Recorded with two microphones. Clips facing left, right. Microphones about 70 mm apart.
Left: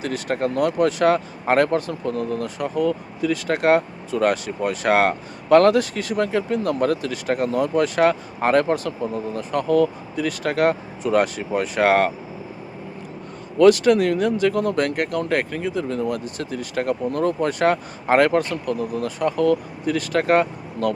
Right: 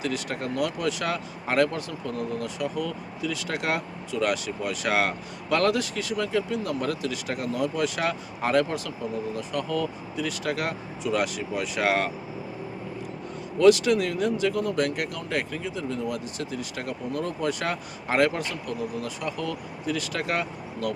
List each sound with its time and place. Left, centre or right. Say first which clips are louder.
0.0 s speech: left 6 dB; left
13.6 s speech: left 5 dB; left